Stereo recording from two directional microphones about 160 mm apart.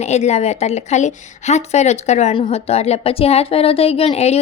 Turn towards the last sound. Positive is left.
turn(degrees=40)  # may be behind; listen again after turning